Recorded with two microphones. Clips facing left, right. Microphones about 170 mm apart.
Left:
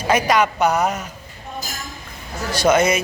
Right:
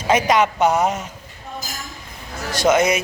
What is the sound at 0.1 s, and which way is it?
Speech, 25° right (ahead or behind).